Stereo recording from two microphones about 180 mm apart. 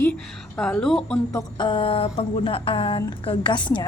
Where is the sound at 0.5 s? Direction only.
5° left (ahead or behind).